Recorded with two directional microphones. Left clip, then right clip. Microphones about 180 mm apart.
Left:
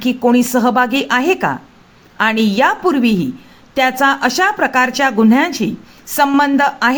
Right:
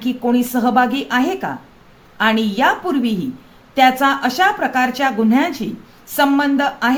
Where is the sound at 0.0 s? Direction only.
40° left (ahead or behind).